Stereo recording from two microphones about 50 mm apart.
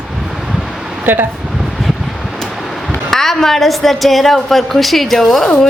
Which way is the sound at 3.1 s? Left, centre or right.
Centre.